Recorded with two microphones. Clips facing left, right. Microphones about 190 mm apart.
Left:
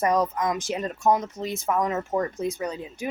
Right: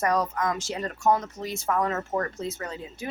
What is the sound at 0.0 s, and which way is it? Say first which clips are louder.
Speech: left 2 dB; 20° left (ahead or behind).